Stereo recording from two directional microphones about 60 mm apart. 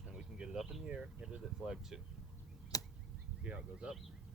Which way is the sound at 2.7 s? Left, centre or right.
Left.